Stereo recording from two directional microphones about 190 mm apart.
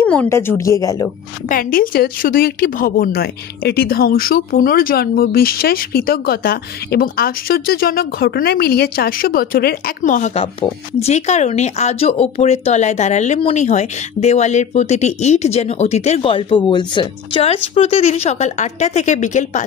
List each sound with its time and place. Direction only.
0.0 s speech: 10° left (ahead or behind)
1.5 s speech: 50° left (ahead or behind)